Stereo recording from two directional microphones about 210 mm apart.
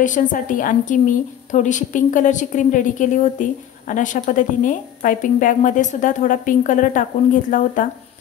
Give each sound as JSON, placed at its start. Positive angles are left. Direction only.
{"t": 0.0, "sound": "a woman's voice", "side_deg": 40}